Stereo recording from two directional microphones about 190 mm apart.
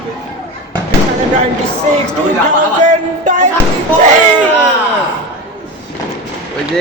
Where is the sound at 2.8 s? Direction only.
40° right (ahead or behind).